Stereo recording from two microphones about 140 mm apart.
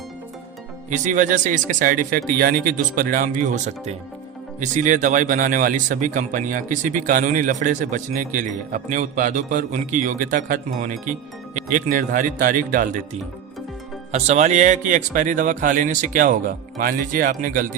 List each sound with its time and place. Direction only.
0.9 s speech: 65° right (ahead or behind)
14.1 s speech: 55° right (ahead or behind); by 17.7 s 75° right (ahead or behind)